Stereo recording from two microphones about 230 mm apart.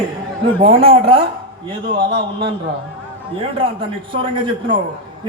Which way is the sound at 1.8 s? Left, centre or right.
Right.